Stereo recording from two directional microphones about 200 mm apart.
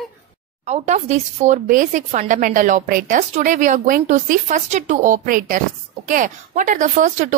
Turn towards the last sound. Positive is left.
turn(degrees=-40)  # may be behind; listen again after turning